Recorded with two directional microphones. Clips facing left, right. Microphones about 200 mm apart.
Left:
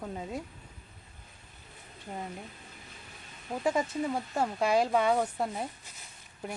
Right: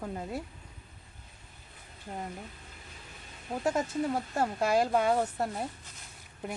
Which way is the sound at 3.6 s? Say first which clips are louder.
Even; centre (ahead or behind).